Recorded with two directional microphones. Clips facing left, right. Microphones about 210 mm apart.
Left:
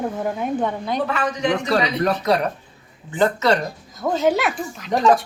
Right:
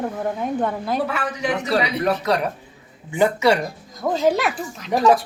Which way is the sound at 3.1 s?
10° right (ahead or behind).